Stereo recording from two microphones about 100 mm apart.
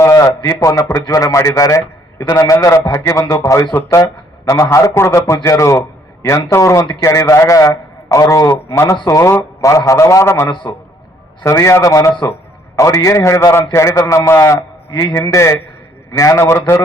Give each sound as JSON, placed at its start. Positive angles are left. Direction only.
{"t": 0.0, "sound": "a man's voice", "side_deg": 35}
{"t": 10.5, "sound": "a man's voice", "side_deg": 50}
{"t": 11.4, "sound": "a man's voice", "side_deg": 30}